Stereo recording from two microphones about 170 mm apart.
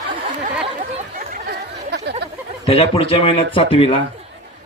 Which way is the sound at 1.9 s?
80° right.